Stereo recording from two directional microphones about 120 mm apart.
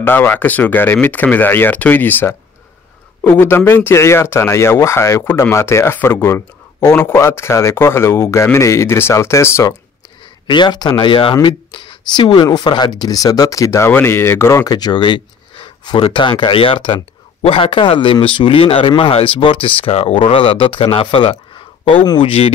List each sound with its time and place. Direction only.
0.0 s speech: 15° left (ahead or behind)
10.4 s speech: 40° left (ahead or behind)